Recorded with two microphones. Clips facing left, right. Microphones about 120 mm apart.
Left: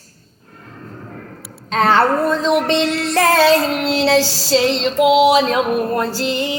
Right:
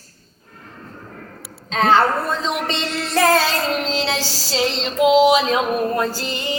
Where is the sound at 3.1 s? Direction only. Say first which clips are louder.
Left 4 dB; 70° left (ahead or behind).